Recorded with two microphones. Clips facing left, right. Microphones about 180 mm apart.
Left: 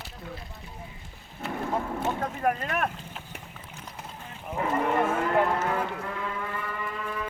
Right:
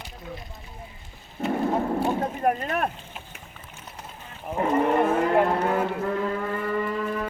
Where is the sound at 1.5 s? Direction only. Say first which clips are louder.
Right 6 dB; 40° right (ahead or behind).